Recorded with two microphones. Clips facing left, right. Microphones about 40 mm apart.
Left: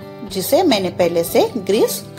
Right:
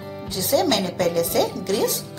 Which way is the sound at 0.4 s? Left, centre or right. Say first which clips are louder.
Left 6 dB; left.